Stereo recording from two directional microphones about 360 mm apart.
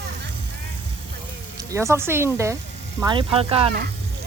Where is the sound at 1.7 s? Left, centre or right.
Centre.